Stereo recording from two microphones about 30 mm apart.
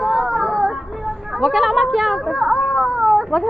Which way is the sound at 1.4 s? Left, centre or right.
Centre.